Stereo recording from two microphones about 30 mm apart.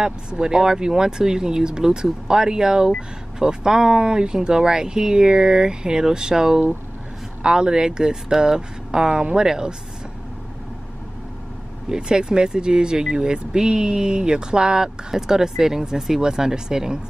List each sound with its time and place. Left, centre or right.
0.0 s speech: right
11.9 s speech: right